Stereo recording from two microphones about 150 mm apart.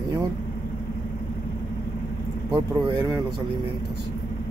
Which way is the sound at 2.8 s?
30° right (ahead or behind).